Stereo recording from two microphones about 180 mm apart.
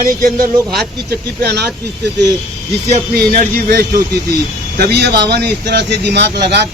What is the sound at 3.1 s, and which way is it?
Speech, 50° right (ahead or behind).